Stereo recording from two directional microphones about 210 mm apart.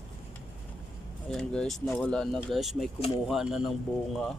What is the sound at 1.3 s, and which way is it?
Speech, centre (ahead or behind).